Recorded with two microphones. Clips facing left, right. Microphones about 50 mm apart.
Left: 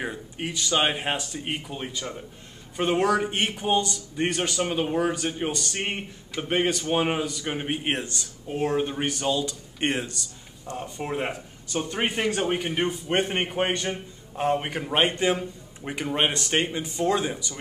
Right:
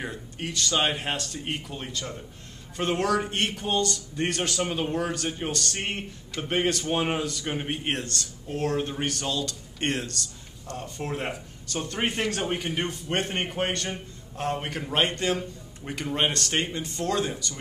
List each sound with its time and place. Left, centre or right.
0.0 s a man's voice: centre